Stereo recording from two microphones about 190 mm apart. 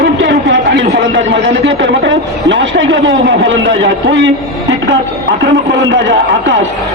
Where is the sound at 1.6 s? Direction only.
75° right (ahead or behind).